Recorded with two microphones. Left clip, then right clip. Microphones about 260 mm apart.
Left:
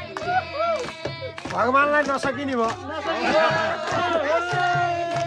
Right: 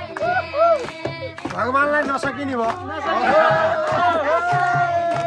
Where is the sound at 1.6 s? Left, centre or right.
Centre.